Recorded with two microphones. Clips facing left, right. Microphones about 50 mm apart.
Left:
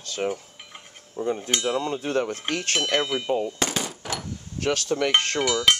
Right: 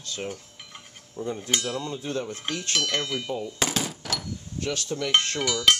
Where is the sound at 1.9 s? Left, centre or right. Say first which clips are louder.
Left 5 dB; left.